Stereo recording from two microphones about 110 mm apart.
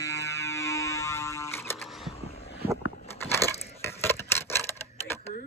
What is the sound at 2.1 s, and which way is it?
Vehicle, 65° left (ahead or behind).